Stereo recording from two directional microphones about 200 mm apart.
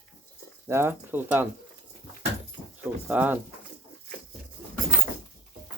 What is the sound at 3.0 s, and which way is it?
Speech, 10° right (ahead or behind).